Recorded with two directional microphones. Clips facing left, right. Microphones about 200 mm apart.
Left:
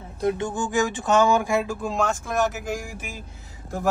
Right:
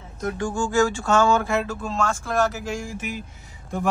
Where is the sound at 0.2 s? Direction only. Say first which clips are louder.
Left 1 dB; 20° left (ahead or behind).